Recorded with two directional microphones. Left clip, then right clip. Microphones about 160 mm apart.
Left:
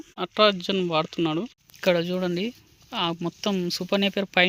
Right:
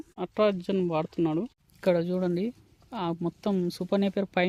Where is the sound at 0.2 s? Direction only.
Centre (ahead or behind).